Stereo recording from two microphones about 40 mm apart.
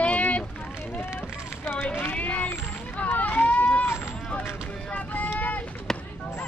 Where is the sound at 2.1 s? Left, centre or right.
Left.